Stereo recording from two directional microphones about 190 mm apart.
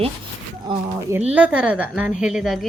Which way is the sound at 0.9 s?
15° right (ahead or behind).